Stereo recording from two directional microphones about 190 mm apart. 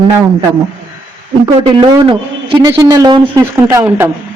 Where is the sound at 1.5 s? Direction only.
25° right (ahead or behind).